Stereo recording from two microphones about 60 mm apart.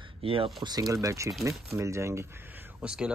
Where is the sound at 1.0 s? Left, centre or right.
Right.